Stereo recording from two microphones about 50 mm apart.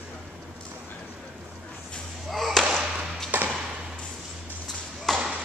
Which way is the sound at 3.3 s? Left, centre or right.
Right.